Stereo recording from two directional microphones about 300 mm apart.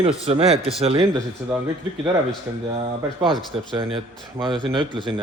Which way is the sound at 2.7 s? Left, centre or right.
Centre.